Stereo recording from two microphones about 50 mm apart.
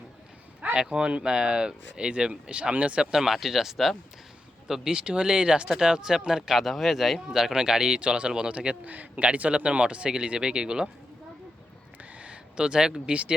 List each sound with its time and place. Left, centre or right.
0.6 s a man's voice: right
3.1 s a man's voice: centre
12.2 s speech: right